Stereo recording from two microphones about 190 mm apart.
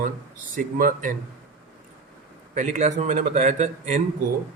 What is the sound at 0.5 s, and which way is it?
Speech, 45° right (ahead or behind).